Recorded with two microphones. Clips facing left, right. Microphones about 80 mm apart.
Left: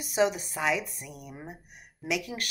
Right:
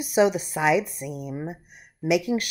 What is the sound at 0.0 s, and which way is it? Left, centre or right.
Speech, centre.